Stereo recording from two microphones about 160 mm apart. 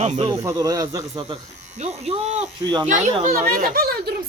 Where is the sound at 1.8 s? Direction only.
40° right (ahead or behind).